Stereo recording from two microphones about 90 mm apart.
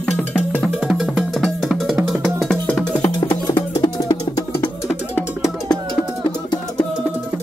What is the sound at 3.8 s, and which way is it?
Music, 45° left (ahead or behind).